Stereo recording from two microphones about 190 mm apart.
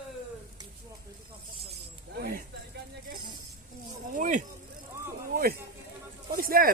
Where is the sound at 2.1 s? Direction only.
50° right (ahead or behind).